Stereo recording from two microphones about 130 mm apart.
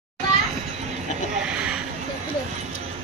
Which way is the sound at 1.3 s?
5° right (ahead or behind).